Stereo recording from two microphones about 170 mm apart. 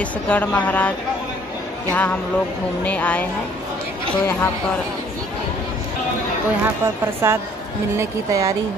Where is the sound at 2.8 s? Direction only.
10° left (ahead or behind).